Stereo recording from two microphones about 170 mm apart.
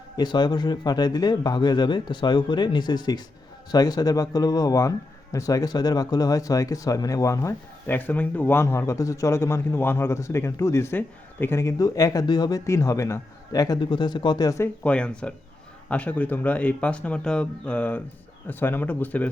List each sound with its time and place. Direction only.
0.2 s speech: 25° left (ahead or behind)
14.8 s speech: 5° left (ahead or behind)